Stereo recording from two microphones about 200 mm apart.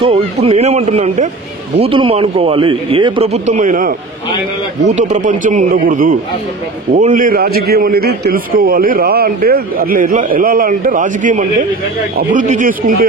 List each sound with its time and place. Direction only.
0.0 s a man's voice: 30° right (ahead or behind)
3.4 s a man's voice: 40° right (ahead or behind)
4.9 s a man's voice: 35° right (ahead or behind)